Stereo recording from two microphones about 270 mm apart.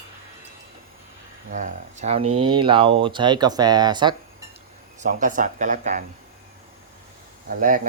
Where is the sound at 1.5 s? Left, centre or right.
Right.